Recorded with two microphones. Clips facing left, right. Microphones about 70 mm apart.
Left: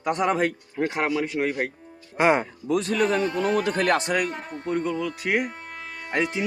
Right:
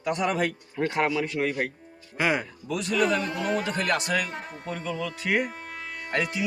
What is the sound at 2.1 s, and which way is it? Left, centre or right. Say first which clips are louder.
A man's voice: left 6 dB; left.